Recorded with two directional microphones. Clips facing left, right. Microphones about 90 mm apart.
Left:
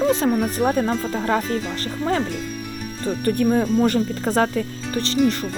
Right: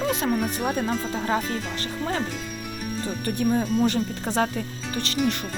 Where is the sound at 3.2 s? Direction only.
55° left (ahead or behind).